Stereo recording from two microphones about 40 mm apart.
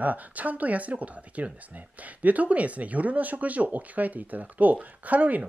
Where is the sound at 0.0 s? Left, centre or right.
Right.